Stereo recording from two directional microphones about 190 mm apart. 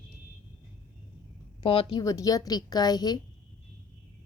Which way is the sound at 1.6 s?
30° left (ahead or behind).